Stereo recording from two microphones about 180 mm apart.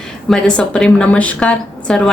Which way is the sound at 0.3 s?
5° left (ahead or behind).